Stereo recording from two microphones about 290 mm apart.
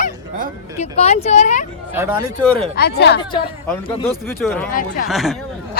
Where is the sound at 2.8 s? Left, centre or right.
Left.